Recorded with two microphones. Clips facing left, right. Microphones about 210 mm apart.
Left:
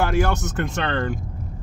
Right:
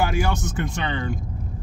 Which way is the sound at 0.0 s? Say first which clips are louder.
Left 2 dB; 10° right (ahead or behind).